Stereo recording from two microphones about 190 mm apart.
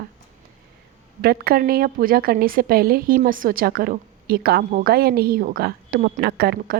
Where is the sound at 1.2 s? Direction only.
55° right (ahead or behind).